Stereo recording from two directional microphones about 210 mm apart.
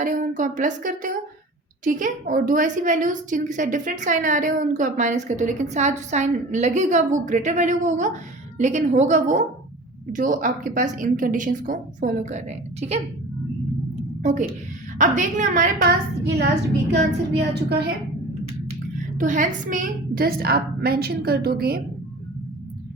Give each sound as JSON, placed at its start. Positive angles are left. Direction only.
{"t": 0.0, "sound": "a woman's voice", "side_deg": -40}
{"t": 14.2, "sound": "a woman's voice", "side_deg": -35}
{"t": 19.2, "sound": "a woman's voice", "side_deg": -35}